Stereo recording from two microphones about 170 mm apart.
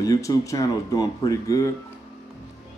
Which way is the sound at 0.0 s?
20° left (ahead or behind).